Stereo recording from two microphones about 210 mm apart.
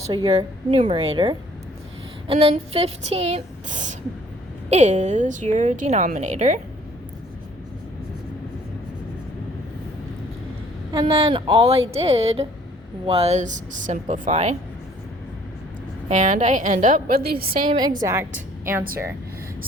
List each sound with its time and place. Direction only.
0.1 s a woman's voice: 25° right (ahead or behind)
10.9 s a woman's voice: 25° right (ahead or behind)
16.0 s a woman's voice: 35° right (ahead or behind)
17.7 s a woman's voice: 20° right (ahead or behind)